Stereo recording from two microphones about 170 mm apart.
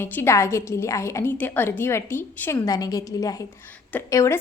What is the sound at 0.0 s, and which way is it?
A woman's voice, 15° left (ahead or behind).